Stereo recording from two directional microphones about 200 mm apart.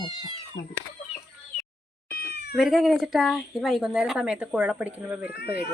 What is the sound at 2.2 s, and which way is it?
Cat, 55° left (ahead or behind).